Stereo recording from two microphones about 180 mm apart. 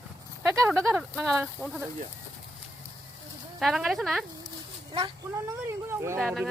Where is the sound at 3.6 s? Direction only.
Centre (ahead or behind).